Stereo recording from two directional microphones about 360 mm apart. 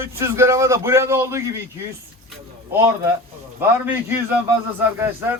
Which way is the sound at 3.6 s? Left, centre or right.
Centre.